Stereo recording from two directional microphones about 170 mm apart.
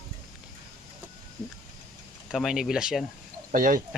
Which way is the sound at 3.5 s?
55° right (ahead or behind).